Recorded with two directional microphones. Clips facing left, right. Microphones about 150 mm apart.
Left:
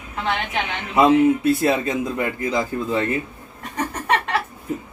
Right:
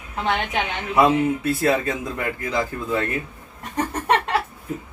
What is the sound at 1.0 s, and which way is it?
Speech, 20° left (ahead or behind).